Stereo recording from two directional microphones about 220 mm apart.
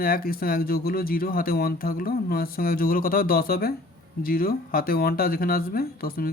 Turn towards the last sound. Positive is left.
turn(degrees=45)  # may be behind; listen again after turning